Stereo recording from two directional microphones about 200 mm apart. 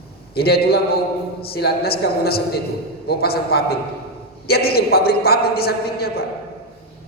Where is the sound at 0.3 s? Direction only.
50° left (ahead or behind).